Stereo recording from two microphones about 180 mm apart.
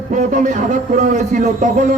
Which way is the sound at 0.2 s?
45° right (ahead or behind).